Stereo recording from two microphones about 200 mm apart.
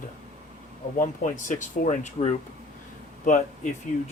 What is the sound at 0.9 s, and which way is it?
Speech, 40° left (ahead or behind).